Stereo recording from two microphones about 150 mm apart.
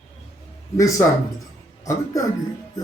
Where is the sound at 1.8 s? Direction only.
25° left (ahead or behind).